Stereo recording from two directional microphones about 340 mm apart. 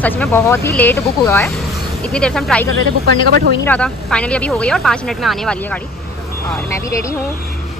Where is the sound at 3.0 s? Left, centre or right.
Right.